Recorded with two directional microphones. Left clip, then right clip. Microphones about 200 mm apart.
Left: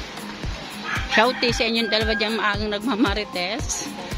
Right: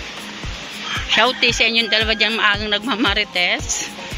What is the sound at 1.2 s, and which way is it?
Speech, 10° left (ahead or behind).